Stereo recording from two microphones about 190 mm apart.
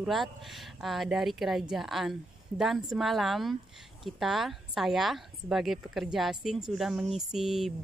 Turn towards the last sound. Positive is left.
turn(degrees=0)  # may be behind; listen again after turning